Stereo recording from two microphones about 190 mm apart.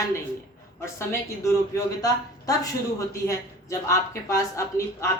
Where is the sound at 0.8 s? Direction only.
15° left (ahead or behind).